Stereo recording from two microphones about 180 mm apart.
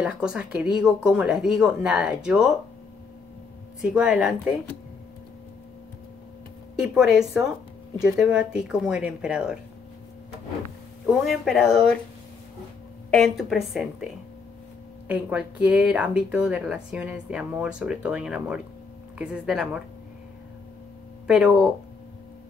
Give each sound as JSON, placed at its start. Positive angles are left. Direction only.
{"t": 0.0, "sound": "speech", "side_deg": -5}
{"t": 3.8, "sound": "speech", "side_deg": -5}
{"t": 6.8, "sound": "speech", "side_deg": -5}
{"t": 11.1, "sound": "speech", "side_deg": 0}
{"t": 13.1, "sound": "speech", "side_deg": 0}
{"t": 15.0, "sound": "speech", "side_deg": -5}
{"t": 21.3, "sound": "speech", "side_deg": -5}